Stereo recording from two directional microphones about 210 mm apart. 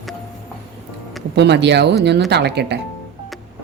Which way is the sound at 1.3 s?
55° right (ahead or behind).